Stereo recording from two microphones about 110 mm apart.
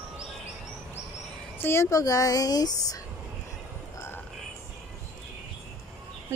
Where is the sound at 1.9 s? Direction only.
30° left (ahead or behind).